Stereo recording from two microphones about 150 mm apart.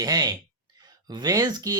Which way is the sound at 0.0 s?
25° right (ahead or behind).